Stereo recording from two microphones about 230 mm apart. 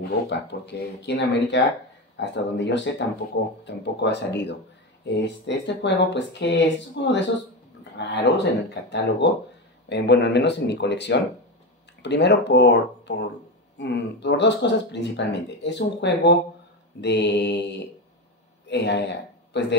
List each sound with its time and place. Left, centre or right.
0.3 s speech: left
18.7 s speech: left